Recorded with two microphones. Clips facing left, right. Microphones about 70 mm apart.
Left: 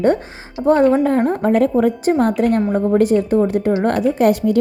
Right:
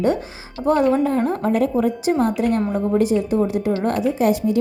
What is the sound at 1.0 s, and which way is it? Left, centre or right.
Speech, left.